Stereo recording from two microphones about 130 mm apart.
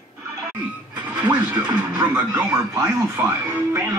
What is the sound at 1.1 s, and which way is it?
Speech, 10° right (ahead or behind).